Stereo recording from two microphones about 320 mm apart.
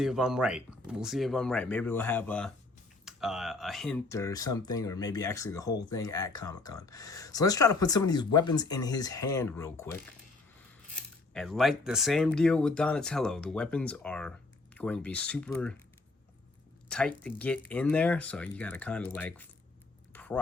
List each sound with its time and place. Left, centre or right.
0.0 s speech: centre
11.3 s speech: centre
16.9 s speech: centre
20.1 s a sound: centre